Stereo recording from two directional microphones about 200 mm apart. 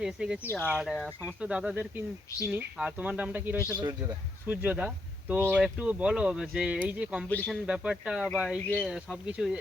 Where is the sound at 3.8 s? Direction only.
15° right (ahead or behind).